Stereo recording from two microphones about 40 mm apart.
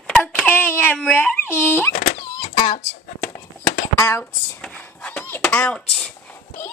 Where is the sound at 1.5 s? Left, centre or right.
Left.